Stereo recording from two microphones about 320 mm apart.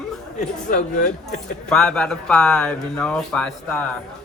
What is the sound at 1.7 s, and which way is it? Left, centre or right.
Speech, centre.